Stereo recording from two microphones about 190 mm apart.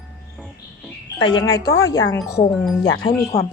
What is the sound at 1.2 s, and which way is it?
Speech, 25° left (ahead or behind).